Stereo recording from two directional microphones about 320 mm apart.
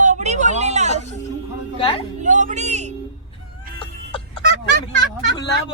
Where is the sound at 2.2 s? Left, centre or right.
Right.